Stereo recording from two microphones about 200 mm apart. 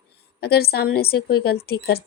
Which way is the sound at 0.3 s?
55° left (ahead or behind).